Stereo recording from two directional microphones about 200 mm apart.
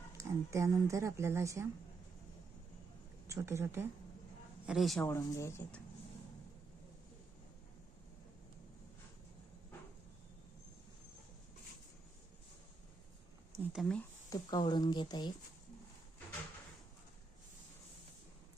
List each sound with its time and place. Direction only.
0.2 s speech: 15° right (ahead or behind)
3.2 s speech: 15° right (ahead or behind)
4.6 s a man's voice: centre (ahead or behind)
5.0 s speech: 15° left (ahead or behind)
13.7 s a man's voice: 5° left (ahead or behind)
14.3 s speech: 20° left (ahead or behind)